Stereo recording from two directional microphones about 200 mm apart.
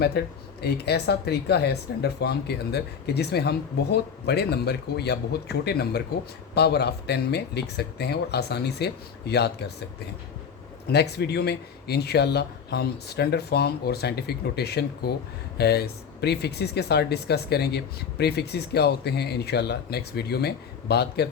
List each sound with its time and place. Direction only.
0.2 s speech: 55° left (ahead or behind)
10.8 s speech: 55° left (ahead or behind)